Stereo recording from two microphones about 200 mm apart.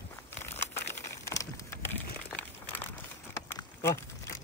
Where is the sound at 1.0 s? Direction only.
15° left (ahead or behind).